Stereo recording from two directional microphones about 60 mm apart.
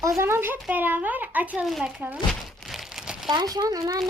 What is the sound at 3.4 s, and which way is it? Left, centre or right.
Speech, right.